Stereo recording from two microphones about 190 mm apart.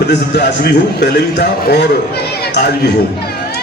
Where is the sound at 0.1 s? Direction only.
60° left (ahead or behind).